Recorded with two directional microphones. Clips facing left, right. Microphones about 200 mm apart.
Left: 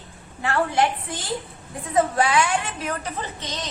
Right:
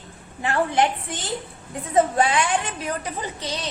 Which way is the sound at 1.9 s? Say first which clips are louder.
Right 1 dB; 25° right (ahead or behind).